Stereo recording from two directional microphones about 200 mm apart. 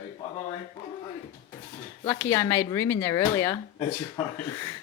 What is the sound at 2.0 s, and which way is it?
Speech, 15° left (ahead or behind).